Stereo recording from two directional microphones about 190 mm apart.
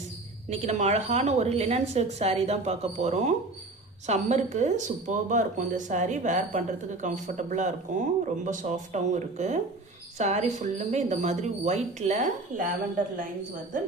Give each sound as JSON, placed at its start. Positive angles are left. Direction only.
{"t": 0.5, "sound": "speech", "side_deg": -35}
{"t": 13.7, "sound": "speech", "side_deg": -45}